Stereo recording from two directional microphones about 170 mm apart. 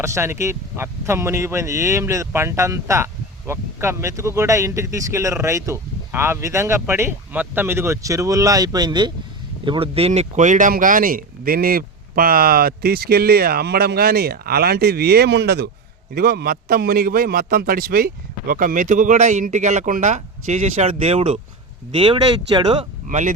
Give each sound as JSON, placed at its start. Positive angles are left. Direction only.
{"t": 0.0, "sound": "speech", "side_deg": -15}
{"t": 16.1, "sound": "a man's voice", "side_deg": -65}
{"t": 23.0, "sound": "speech", "side_deg": -45}